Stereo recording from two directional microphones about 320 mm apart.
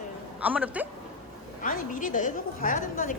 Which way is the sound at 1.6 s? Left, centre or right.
Left.